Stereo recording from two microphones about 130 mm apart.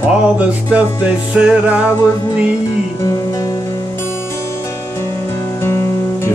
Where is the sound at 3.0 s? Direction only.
25° left (ahead or behind).